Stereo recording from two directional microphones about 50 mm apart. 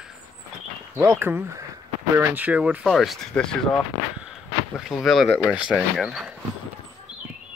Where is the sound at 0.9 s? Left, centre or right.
Right.